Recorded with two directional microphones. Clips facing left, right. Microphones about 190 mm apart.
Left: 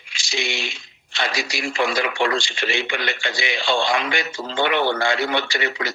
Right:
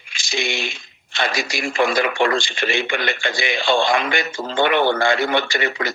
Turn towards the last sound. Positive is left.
turn(degrees=-50)  # may be behind; listen again after turning